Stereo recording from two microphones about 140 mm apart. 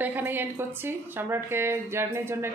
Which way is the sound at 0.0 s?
15° right (ahead or behind).